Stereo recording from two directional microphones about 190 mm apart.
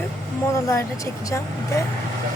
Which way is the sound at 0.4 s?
15° left (ahead or behind).